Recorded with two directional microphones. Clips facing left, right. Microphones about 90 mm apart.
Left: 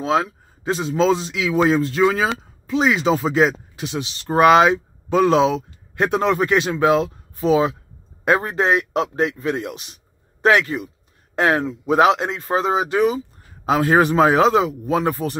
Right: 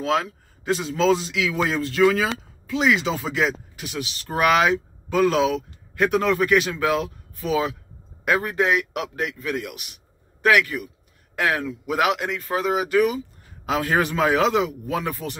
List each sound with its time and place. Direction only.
0.0 s a man's voice: 25° left (ahead or behind)